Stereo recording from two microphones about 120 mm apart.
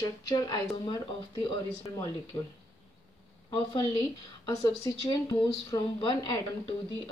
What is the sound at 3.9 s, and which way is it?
Speech, 35° left (ahead or behind).